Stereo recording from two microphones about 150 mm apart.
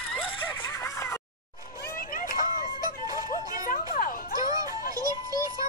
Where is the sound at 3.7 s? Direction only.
65° left (ahead or behind).